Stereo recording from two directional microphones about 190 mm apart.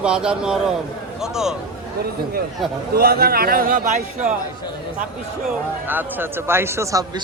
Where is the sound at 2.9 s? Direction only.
55° right (ahead or behind).